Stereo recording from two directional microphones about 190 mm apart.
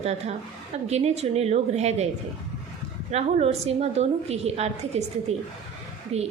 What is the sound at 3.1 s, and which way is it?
A woman's voice, 35° right (ahead or behind).